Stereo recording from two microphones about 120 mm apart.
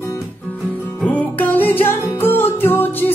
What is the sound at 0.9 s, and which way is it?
Music, 10° left (ahead or behind).